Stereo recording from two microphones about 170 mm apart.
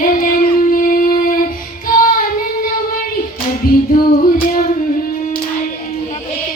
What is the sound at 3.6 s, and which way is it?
Female singing, 55° left (ahead or behind).